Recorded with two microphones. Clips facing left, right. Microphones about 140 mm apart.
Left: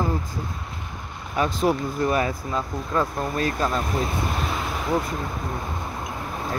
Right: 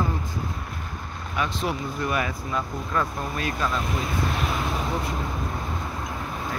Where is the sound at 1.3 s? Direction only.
40° left (ahead or behind).